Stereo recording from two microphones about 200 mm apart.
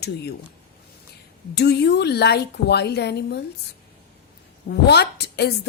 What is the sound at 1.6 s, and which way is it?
A woman's voice, 55° left (ahead or behind).